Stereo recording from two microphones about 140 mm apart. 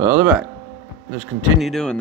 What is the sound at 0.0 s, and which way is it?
Speech, 15° right (ahead or behind).